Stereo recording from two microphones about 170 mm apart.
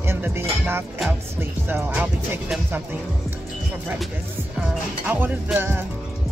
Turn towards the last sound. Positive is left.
turn(degrees=-15)  # may be behind; listen again after turning